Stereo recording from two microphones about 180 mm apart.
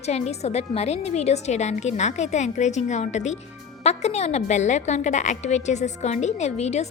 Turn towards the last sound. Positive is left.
turn(degrees=35)  # may be behind; listen again after turning